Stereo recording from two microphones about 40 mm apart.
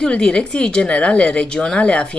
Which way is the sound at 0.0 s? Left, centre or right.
Left.